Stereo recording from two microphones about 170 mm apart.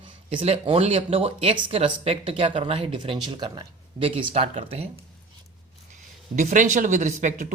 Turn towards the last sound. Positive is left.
turn(degrees=-45)  # may be behind; listen again after turning